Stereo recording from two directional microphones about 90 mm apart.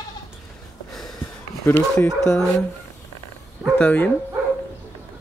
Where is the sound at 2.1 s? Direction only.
35° left (ahead or behind).